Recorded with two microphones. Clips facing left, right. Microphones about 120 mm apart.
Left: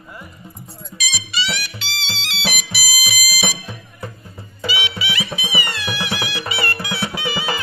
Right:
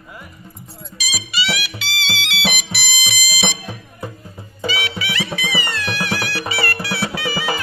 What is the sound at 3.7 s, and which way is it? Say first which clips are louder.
Music: right 2 dB; 15° right (ahead or behind).